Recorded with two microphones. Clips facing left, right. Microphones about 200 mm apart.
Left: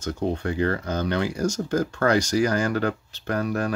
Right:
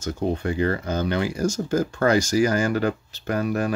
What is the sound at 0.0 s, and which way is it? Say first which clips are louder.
Speech: right 1 dB; 5° right (ahead or behind).